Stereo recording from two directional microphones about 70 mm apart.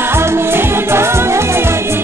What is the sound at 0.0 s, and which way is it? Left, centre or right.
Music, right.